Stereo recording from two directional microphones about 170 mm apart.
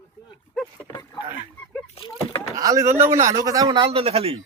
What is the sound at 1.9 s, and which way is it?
Vehicle, 35° left (ahead or behind).